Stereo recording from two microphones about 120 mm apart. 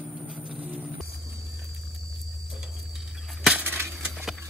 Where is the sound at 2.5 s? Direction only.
Centre (ahead or behind).